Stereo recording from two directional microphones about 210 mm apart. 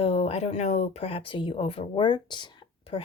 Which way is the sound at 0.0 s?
30° left (ahead or behind).